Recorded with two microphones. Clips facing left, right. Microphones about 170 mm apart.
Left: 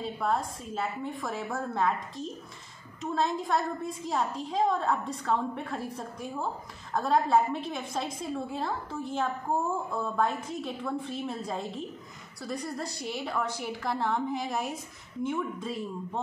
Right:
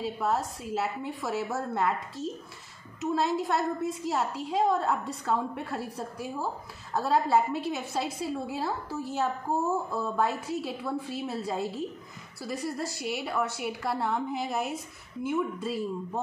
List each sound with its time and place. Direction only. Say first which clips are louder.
0.0 s a woman's voice: right 1 dB; 5° right (ahead or behind)